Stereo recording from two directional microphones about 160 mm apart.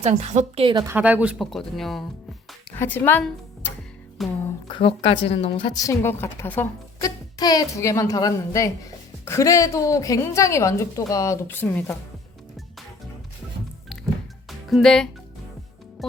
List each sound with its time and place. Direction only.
0.0 s a woman's voice: 45° right (ahead or behind)
0.9 s a woman's voice: 10° right (ahead or behind)
4.7 s a woman's voice: 35° left (ahead or behind)
5.8 s a woman's voice: 15° left (ahead or behind)
7.0 s a woman's voice: 25° left (ahead or behind)
14.7 s speech: centre (ahead or behind)
16.0 s music: centre (ahead or behind)